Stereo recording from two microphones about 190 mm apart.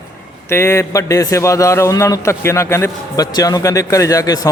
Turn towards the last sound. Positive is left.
turn(degrees=20)  # may be behind; listen again after turning